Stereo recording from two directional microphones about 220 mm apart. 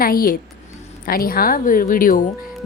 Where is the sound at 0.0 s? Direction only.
40° left (ahead or behind).